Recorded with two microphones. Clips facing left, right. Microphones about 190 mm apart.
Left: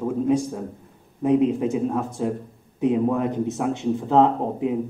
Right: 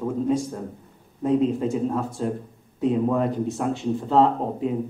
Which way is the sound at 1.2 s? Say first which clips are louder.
Left 2 dB; 15° left (ahead or behind).